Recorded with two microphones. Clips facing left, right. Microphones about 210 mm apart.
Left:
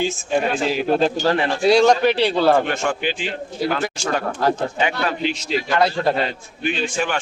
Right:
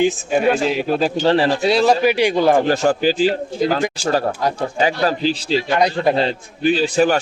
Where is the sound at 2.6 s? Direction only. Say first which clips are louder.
Right 7 dB; 35° right (ahead or behind).